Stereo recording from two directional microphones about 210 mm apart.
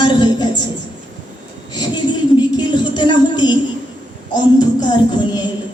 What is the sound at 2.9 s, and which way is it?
Speech, 20° left (ahead or behind).